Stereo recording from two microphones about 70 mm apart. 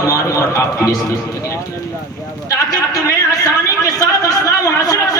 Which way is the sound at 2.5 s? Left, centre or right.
Left.